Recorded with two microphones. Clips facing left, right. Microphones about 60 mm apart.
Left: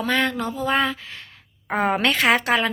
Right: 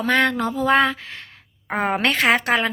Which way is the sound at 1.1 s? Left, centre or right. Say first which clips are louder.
Right 2 dB; right.